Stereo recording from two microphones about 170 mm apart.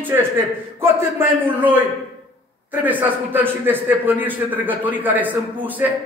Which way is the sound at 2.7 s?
10° right (ahead or behind).